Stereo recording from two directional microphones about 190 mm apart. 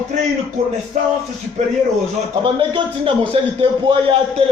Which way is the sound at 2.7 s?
25° right (ahead or behind).